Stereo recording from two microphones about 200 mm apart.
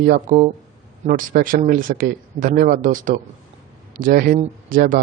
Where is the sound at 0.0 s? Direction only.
45° right (ahead or behind).